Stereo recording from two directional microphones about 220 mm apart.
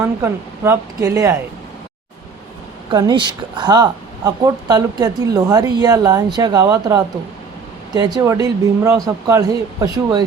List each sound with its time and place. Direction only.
0.0 s speech: 10° right (ahead or behind)
2.9 s speech: 20° right (ahead or behind)